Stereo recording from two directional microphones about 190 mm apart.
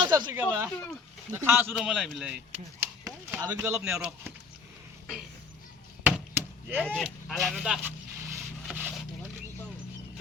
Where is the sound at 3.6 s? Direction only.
10° right (ahead or behind).